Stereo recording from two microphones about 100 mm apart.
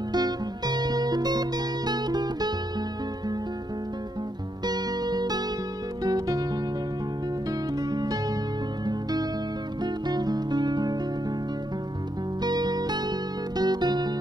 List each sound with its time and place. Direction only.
0.1 s music: 45° right (ahead or behind)
4.6 s music: 45° right (ahead or behind)
7.9 s music: 45° right (ahead or behind)
10.0 s music: 45° right (ahead or behind)
12.4 s music: 45° right (ahead or behind)